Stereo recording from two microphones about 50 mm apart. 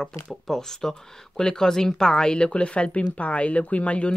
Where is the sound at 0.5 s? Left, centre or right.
Centre.